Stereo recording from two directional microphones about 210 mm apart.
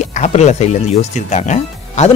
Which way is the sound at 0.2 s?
30° left (ahead or behind).